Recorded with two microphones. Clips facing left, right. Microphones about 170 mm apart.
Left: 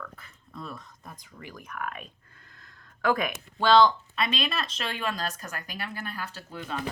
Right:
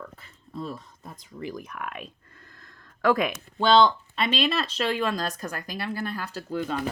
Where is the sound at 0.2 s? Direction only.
30° right (ahead or behind).